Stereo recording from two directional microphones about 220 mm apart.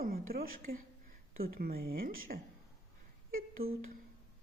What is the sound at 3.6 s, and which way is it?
Speech, 45° right (ahead or behind).